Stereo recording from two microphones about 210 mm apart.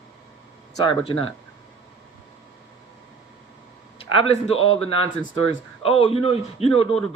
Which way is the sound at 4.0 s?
25° left (ahead or behind).